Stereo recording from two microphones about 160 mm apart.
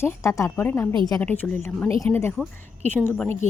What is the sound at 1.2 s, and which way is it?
A woman's voice, 10° left (ahead or behind).